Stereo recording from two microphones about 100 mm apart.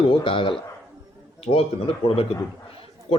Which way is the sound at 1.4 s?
75° left (ahead or behind).